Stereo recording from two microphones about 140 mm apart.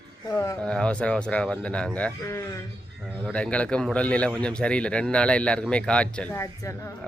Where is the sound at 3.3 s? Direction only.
10° left (ahead or behind).